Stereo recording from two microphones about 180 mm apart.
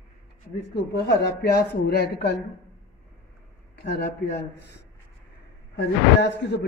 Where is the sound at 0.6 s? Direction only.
70° left (ahead or behind).